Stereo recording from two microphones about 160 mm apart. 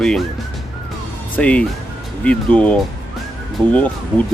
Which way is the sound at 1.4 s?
5° left (ahead or behind).